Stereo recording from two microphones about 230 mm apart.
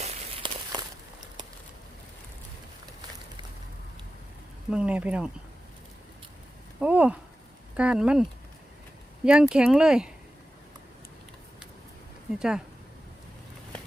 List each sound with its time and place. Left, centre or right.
0.0 s walk: right
4.7 s speech: centre
6.7 s speech: centre
12.4 s speech: centre